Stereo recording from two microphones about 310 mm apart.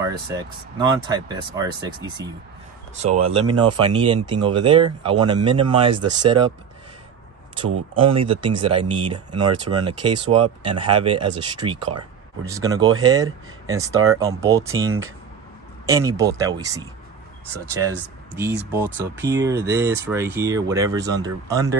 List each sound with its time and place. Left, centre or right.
0.0 s speech: centre
7.7 s speech: right
8.2 s speech: centre
15.9 s speech: centre
18.7 s speech: centre